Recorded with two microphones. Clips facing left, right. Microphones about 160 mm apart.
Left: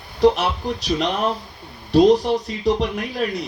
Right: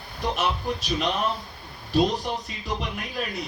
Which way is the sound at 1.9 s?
75° left (ahead or behind).